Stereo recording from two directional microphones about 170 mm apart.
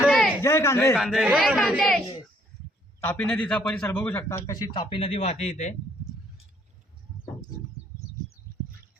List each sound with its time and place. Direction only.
0.0 s a sound: centre (ahead or behind)
0.4 s a man's voice: 15° left (ahead or behind)
0.9 s speech: 5° right (ahead or behind)
3.0 s a man's voice: 10° left (ahead or behind); by 5.7 s 40° left (ahead or behind)